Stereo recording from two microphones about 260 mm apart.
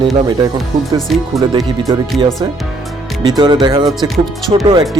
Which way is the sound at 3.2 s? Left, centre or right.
Centre.